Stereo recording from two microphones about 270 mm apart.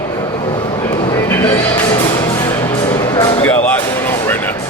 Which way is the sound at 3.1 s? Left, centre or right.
Centre.